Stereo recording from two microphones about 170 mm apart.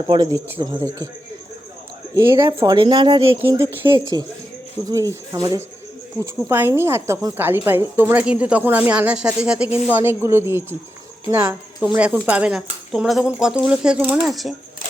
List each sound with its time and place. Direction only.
0.1 s speech: 20° right (ahead or behind)
2.1 s a woman's voice: 20° right (ahead or behind); by 14.5 s centre (ahead or behind)